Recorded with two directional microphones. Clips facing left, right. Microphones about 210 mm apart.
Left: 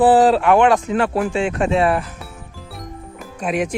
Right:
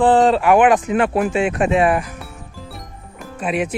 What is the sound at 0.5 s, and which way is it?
Speech, 15° right (ahead or behind).